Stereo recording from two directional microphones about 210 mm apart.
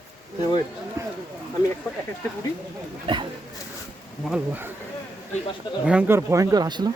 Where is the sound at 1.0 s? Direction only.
15° right (ahead or behind).